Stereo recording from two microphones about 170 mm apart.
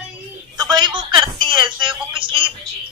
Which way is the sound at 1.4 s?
30° right (ahead or behind).